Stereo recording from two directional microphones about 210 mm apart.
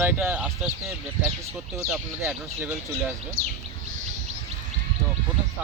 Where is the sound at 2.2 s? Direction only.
10° right (ahead or behind).